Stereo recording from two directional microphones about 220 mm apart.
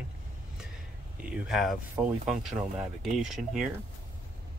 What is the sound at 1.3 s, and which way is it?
Speech, 5° right (ahead or behind).